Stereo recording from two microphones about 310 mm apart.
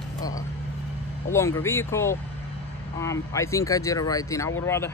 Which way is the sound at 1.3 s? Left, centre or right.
Centre.